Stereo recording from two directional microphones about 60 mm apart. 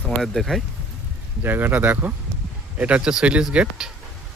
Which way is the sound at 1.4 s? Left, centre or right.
Right.